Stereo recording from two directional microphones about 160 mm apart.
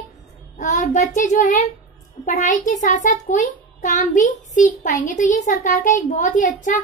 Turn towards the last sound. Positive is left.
turn(degrees=55)  # may be behind; listen again after turning